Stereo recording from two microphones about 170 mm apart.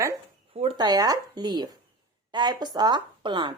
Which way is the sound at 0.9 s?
20° right (ahead or behind).